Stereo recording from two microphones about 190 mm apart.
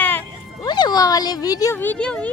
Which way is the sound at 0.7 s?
20° left (ahead or behind).